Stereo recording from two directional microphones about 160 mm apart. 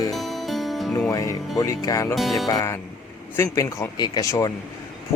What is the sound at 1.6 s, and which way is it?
Speech, 20° left (ahead or behind).